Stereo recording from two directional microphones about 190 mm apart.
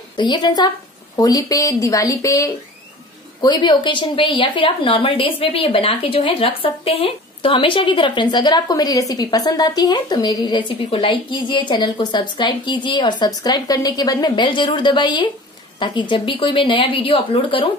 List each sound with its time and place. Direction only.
0.1 s a woman's voice: 25° left (ahead or behind)